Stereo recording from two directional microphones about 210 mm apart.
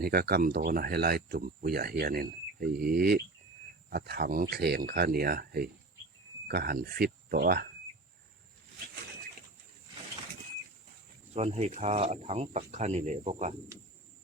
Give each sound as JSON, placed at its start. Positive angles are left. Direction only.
{"t": 0.0, "sound": "speech", "side_deg": -45}
{"t": 11.3, "sound": "speech", "side_deg": -30}